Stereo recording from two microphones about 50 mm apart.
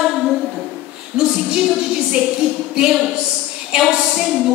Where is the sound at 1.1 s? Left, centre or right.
Centre.